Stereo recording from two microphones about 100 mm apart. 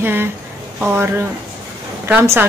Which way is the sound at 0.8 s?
25° right (ahead or behind).